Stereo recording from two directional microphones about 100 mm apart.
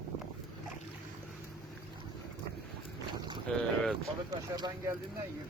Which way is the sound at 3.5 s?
10° left (ahead or behind).